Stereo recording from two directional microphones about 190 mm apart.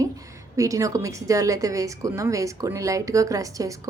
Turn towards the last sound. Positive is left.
turn(degrees=-15)  # may be behind; listen again after turning